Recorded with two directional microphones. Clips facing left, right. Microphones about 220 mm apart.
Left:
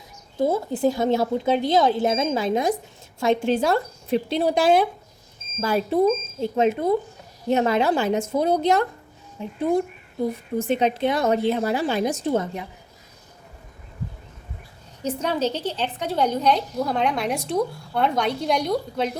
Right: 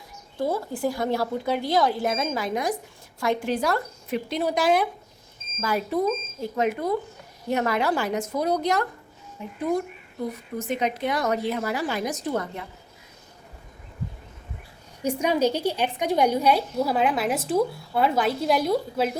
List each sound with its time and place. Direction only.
0.3 s a woman's voice: 25° left (ahead or behind)
15.0 s a woman's voice: 10° right (ahead or behind)